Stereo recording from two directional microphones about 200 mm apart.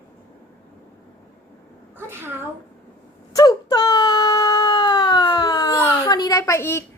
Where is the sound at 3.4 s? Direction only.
20° left (ahead or behind).